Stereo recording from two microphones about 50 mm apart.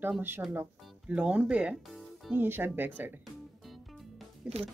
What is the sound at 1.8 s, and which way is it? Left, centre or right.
Music, centre.